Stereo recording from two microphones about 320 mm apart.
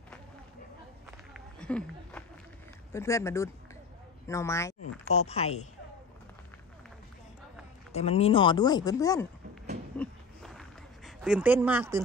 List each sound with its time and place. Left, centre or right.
1.1 s run: centre
2.9 s speech: centre
5.1 s speech: centre
7.9 s speech: centre
9.9 s a sound: centre